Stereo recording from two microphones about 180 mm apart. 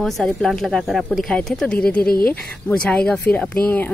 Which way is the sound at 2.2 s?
5° left (ahead or behind).